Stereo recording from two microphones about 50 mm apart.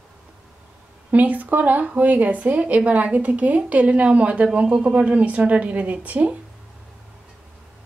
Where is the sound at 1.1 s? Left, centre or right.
Right.